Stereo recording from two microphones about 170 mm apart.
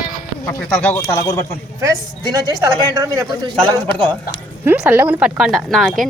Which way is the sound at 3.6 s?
10° left (ahead or behind).